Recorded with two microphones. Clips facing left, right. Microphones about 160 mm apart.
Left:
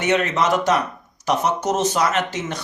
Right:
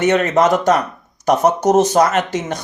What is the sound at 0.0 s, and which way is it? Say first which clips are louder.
Speech: right 6 dB; 45° right (ahead or behind).